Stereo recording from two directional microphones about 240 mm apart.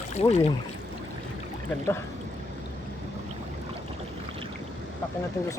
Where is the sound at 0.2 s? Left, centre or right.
Left.